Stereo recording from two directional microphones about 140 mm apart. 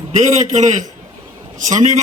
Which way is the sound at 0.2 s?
60° right (ahead or behind).